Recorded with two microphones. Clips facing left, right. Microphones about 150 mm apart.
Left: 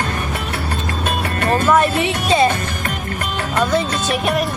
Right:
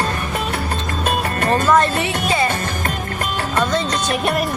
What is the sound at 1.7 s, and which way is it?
Music, 15° left (ahead or behind).